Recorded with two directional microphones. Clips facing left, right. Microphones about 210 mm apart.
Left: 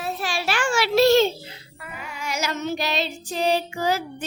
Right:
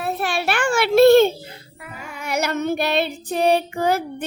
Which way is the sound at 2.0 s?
55° right (ahead or behind).